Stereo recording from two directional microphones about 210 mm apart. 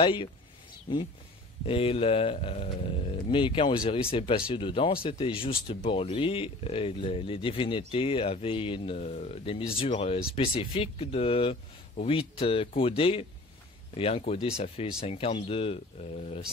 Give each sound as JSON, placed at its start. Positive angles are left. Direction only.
{"t": 0.0, "sound": "speech", "side_deg": 25}